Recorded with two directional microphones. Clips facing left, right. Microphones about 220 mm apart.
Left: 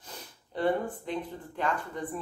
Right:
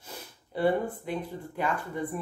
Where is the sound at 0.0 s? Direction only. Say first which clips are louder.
Right 2 dB; 10° right (ahead or behind).